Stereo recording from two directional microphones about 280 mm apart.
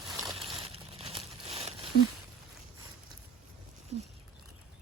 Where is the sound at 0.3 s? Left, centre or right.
Centre.